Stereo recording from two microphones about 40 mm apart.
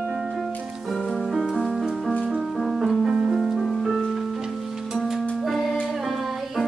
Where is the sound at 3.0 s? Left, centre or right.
Centre.